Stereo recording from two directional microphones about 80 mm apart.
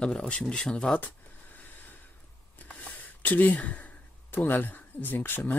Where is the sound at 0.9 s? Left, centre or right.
Left.